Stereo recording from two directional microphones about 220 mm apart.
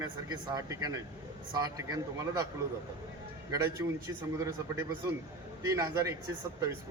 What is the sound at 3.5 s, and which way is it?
A man's voice, 10° right (ahead or behind).